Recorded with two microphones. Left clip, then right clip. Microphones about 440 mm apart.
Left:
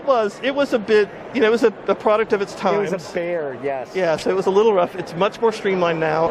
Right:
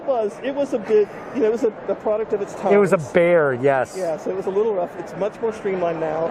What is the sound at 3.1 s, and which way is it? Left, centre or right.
Speech, right.